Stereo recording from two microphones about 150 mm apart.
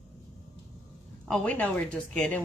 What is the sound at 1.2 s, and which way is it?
A woman's voice, 10° left (ahead or behind).